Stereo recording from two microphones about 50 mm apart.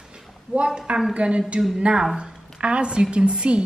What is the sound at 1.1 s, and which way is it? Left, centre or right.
A woman's voice, right.